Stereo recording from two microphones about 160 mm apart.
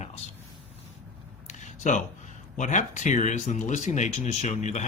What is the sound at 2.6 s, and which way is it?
Speech, 50° left (ahead or behind).